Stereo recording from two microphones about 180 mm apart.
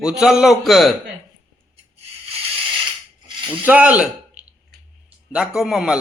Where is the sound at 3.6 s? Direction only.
10° right (ahead or behind).